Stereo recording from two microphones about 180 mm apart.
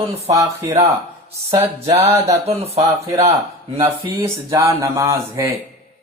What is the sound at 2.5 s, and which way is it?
Speech, 35° right (ahead or behind).